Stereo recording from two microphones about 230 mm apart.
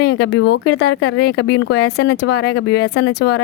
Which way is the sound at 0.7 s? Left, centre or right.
Left.